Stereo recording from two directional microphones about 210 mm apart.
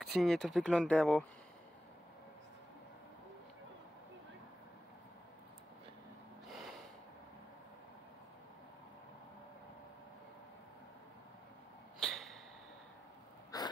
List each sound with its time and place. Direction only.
0.0 s speech: centre (ahead or behind)
12.0 s a sound: centre (ahead or behind)
13.5 s wheeze: 15° left (ahead or behind)